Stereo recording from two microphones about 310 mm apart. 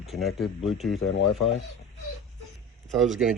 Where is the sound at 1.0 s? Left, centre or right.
Left.